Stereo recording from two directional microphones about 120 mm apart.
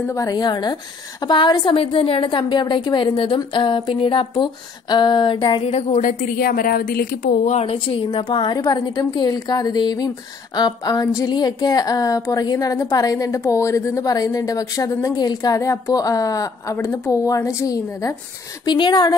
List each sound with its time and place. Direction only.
0.1 s a woman's voice: 30° left (ahead or behind)
5.6 s a woman's voice: 65° left (ahead or behind)
7.4 s a woman's voice: 70° left (ahead or behind)
7.7 s a woman's voice: 45° left (ahead or behind); by 16.7 s 30° left (ahead or behind)
16.7 s a woman's voice: 20° left (ahead or behind)
18.7 s a woman's voice: 40° left (ahead or behind)